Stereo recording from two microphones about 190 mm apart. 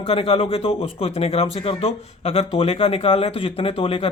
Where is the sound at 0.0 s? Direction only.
30° left (ahead or behind).